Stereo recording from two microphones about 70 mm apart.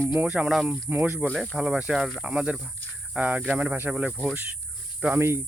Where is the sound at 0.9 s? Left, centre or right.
Right.